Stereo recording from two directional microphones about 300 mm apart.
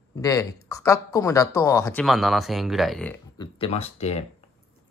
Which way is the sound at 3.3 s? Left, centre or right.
Centre.